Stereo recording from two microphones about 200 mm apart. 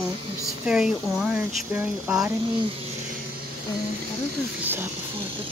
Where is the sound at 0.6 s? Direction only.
5° right (ahead or behind).